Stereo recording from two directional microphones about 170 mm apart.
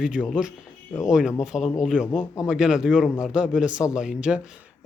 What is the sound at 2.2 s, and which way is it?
Speech, 20° left (ahead or behind).